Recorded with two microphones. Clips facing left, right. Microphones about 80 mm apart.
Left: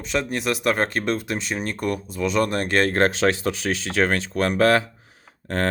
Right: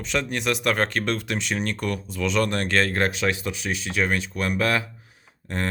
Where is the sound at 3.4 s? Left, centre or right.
Left.